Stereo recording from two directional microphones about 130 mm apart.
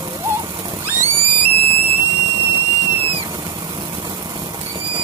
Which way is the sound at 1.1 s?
45° right (ahead or behind).